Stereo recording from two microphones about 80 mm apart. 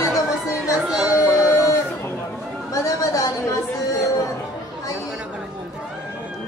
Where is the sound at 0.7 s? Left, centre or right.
Centre.